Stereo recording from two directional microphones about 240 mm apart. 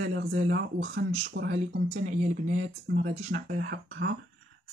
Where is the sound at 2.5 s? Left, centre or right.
Right.